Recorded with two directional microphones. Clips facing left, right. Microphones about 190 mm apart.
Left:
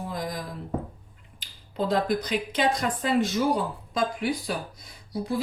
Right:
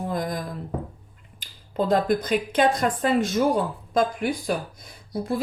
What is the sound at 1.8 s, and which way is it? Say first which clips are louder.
Speech: right 4 dB; 45° right (ahead or behind).